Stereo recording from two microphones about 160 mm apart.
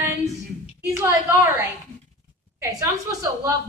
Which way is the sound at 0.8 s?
15° right (ahead or behind).